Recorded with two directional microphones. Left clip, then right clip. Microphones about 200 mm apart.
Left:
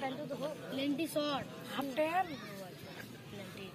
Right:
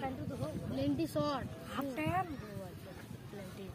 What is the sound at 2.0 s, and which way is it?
Speech, 45° right (ahead or behind).